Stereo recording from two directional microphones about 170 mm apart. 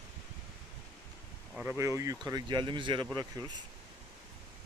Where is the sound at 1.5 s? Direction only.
10° right (ahead or behind).